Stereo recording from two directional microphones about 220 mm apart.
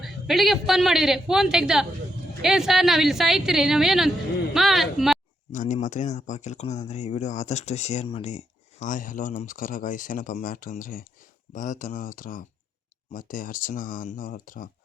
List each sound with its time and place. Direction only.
0.0 s a woman's voice: centre (ahead or behind)
5.5 s speech: 35° left (ahead or behind)